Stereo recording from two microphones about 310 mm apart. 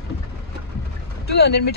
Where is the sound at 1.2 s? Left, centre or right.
Left.